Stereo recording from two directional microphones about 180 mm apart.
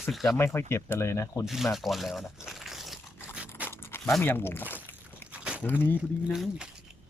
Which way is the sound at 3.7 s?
15° left (ahead or behind).